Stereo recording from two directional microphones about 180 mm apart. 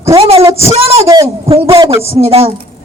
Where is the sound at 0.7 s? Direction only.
35° right (ahead or behind).